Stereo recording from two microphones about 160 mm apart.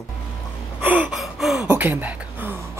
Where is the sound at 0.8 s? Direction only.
10° right (ahead or behind).